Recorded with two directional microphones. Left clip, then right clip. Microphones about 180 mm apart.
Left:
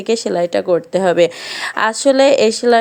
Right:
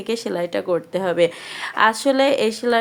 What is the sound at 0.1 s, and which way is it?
A woman's voice, 25° left (ahead or behind).